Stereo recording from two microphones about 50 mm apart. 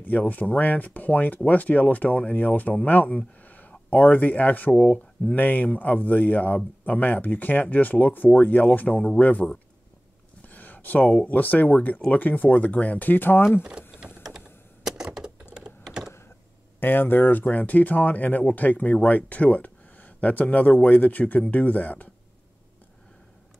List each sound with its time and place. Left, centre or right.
0.3 s speech: left
10.4 s a sound: left
11.2 s speech: left
13.6 s speech: right
14.9 s typewriter: centre
16.8 s speech: left